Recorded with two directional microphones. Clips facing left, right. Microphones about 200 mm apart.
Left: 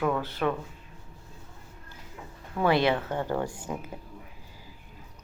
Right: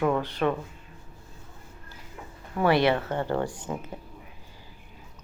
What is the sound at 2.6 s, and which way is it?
Speech, centre (ahead or behind).